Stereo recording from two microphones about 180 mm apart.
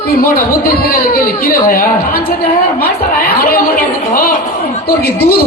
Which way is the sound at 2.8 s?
55° left (ahead or behind).